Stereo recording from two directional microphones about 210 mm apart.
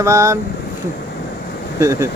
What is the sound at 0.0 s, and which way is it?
Speech, 15° right (ahead or behind).